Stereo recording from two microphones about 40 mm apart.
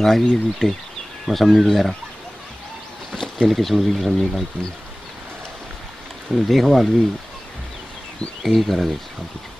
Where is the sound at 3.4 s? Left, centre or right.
Centre.